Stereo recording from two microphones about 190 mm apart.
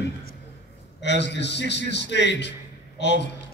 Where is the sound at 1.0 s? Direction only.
65° left (ahead or behind).